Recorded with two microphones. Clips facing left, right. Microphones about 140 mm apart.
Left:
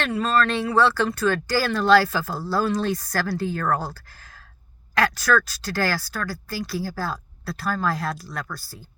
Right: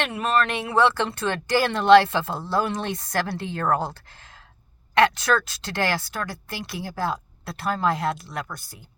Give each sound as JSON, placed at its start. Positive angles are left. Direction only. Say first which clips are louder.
{"t": 0.0, "sound": "speech", "louder": "left 1 dB", "side_deg": -20}